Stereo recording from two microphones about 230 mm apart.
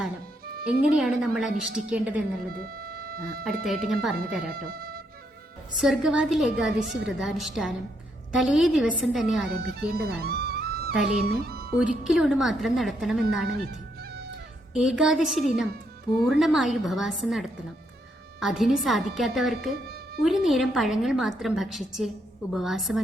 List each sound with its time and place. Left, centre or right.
0.7 s a woman's voice: centre
2.5 s music: right
3.4 s a woman's voice: centre
4.5 s speech: right
5.7 s a woman's voice: centre
9.7 s music: right
11.3 s speech: right
12.0 s a woman's voice: centre
14.7 s a woman's voice: centre